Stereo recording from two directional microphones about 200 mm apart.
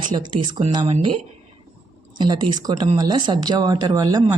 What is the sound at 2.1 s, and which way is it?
Speech, 20° right (ahead or behind).